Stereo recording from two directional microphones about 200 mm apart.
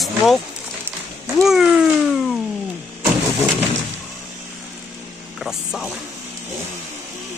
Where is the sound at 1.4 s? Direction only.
Centre (ahead or behind).